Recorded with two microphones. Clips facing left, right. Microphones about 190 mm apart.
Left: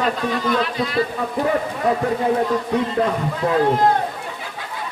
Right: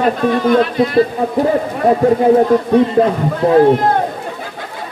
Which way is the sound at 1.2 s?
35° right (ahead or behind).